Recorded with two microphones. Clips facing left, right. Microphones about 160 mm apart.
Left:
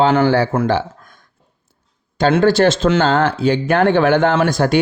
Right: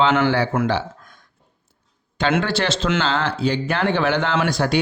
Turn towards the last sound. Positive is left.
turn(degrees=50)  # may be behind; listen again after turning